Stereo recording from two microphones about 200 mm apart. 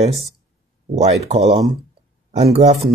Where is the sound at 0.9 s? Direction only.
30° right (ahead or behind).